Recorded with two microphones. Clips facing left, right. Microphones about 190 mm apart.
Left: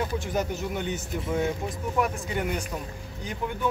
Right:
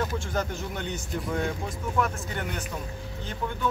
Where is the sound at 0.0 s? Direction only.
20° left (ahead or behind).